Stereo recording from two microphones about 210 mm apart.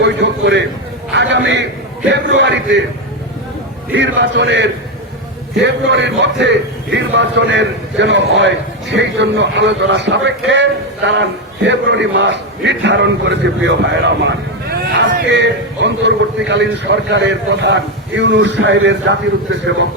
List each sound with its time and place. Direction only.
0.0 s a man's voice: 55° right (ahead or behind)
3.9 s a man's voice: 60° right (ahead or behind)